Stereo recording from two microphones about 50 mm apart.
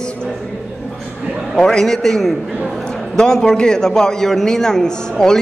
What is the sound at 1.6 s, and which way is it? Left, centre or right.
A man's voice, centre.